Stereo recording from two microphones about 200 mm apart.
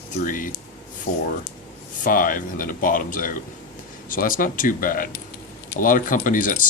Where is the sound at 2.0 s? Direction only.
40° left (ahead or behind).